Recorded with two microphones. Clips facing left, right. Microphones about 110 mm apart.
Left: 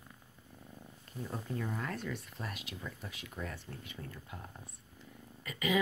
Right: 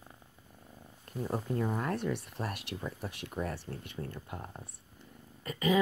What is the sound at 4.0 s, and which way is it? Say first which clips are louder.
Speech: right 6 dB; 35° right (ahead or behind).